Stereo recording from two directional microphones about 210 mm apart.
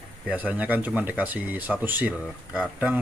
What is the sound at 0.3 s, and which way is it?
Speech, 5° right (ahead or behind).